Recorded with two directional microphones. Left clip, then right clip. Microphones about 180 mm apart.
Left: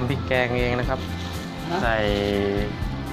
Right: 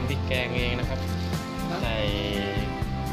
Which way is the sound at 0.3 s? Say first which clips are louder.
Left 6 dB; 20° right (ahead or behind).